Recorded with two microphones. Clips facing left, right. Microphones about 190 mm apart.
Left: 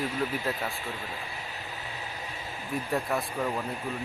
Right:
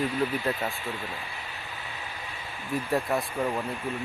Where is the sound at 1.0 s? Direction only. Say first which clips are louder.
Right 1 dB; 40° left (ahead or behind).